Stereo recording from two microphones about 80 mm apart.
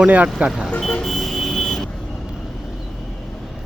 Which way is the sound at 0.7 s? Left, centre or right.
Centre.